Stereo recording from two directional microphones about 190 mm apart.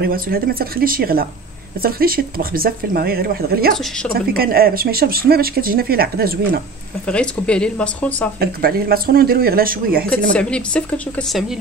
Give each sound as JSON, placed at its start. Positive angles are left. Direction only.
{"t": 0.0, "sound": "speech", "side_deg": -50}
{"t": 7.1, "sound": "speech", "side_deg": 5}
{"t": 8.4, "sound": "speech", "side_deg": -50}
{"t": 10.3, "sound": "speech", "side_deg": 5}